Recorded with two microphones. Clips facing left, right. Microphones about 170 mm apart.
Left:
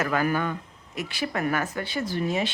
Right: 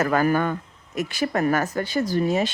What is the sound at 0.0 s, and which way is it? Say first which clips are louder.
A woman's voice: right 5 dB; 45° right (ahead or behind).